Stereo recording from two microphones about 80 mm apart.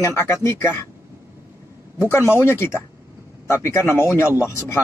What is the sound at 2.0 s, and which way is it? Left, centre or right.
A man's voice, left.